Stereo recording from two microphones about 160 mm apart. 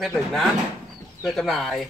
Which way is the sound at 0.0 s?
Centre (ahead or behind).